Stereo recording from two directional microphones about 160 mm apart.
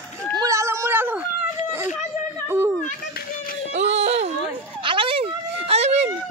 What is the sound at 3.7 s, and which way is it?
Speech, 45° right (ahead or behind).